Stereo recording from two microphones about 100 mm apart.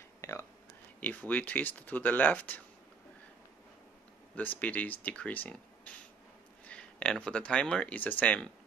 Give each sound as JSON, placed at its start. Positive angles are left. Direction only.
{"t": 0.2, "sound": "a sound", "side_deg": 30}
{"t": 1.0, "sound": "speech", "side_deg": 15}
{"t": 4.4, "sound": "speech", "side_deg": 15}